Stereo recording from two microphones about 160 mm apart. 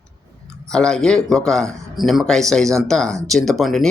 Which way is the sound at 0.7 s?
5° left (ahead or behind).